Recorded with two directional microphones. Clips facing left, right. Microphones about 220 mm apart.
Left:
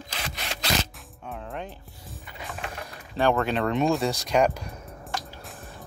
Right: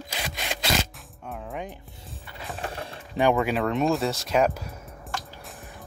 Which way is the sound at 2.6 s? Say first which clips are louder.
Right 3 dB; 30° right (ahead or behind).